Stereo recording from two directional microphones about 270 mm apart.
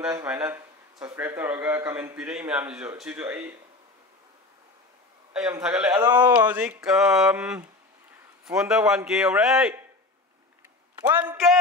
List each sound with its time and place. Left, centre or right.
0.0 s speech: centre
5.3 s speech: centre
11.1 s speech: centre